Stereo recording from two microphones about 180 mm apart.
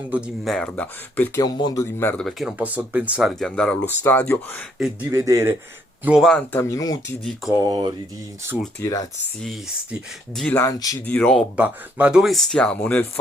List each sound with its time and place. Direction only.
0.1 s speech: centre (ahead or behind)
1.4 s speech: 20° left (ahead or behind); by 2.5 s 5° left (ahead or behind)
2.6 s speech: 10° right (ahead or behind); by 4.6 s 10° left (ahead or behind)
5.1 s a man's voice: 15° right (ahead or behind)
6.1 s speech: centre (ahead or behind); by 7.2 s 20° left (ahead or behind)
7.5 s speech: 20° right (ahead or behind)
8.8 s speech: 20° left (ahead or behind)
9.4 s speech: centre (ahead or behind)
10.6 s speech: 20° left (ahead or behind)
11.0 s speech: 10° left (ahead or behind)
11.5 s speech: 10° right (ahead or behind); by 13.1 s 10° left (ahead or behind)